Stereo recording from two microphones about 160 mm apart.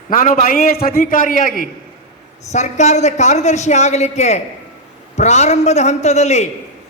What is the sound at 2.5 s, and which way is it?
A man's voice, 45° left (ahead or behind).